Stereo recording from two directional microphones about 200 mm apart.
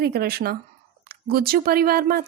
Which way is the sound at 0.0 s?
50° right (ahead or behind).